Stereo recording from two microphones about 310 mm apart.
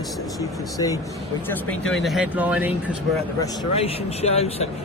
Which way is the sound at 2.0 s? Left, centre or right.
Centre.